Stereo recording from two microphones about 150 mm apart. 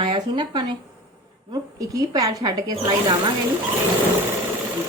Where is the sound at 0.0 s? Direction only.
30° right (ahead or behind).